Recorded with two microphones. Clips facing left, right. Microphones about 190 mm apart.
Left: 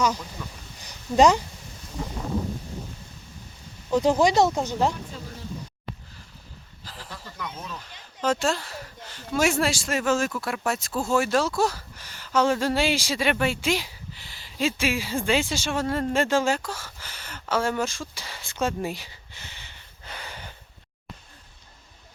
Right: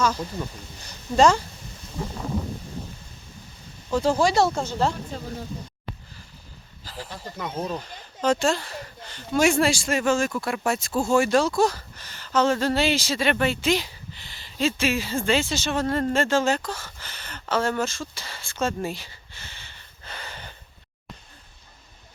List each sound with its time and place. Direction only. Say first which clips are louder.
0.8 s speech: even; 15° left (ahead or behind)
3.9 s speech: left 1 dB; 20° left (ahead or behind)
6.8 s a sound: right 6 dB; centre (ahead or behind)
7.3 s speech: right 8 dB; 45° right (ahead or behind)
8.2 s speech: right 2 dB; 5° left (ahead or behind)